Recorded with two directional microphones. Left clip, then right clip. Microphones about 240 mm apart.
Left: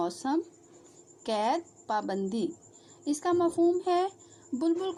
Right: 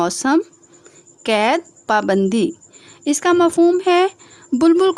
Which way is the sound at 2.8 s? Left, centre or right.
Right.